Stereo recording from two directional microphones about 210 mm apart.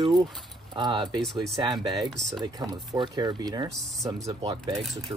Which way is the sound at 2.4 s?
20° right (ahead or behind).